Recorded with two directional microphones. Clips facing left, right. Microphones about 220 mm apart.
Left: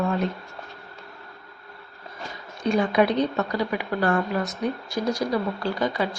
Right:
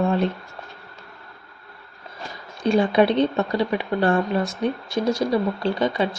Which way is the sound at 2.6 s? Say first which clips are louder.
Right 3 dB; 30° right (ahead or behind).